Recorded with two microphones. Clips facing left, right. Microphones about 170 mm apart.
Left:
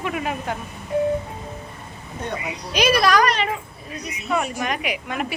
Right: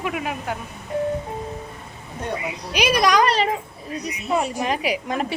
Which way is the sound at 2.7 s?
15° right (ahead or behind).